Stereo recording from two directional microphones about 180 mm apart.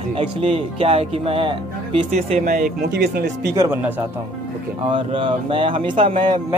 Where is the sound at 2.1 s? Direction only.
40° right (ahead or behind); by 3.3 s 65° right (ahead or behind).